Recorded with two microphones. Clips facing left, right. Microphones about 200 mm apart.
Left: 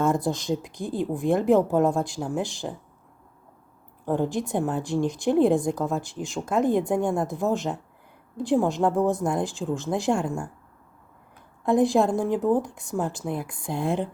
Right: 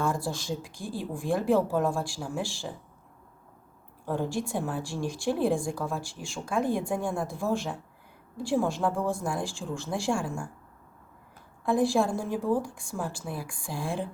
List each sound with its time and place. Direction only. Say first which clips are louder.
0.0 s a woman's voice: left 6 dB; 20° left (ahead or behind)
4.0 s a woman's voice: left 5 dB; 20° left (ahead or behind)
11.6 s a woman's voice: left 4 dB; 20° left (ahead or behind)